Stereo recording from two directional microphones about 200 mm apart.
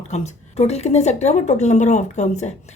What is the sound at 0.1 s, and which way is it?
Speech, 35° left (ahead or behind).